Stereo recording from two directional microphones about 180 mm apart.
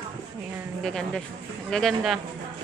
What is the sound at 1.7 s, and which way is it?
Speech, centre (ahead or behind).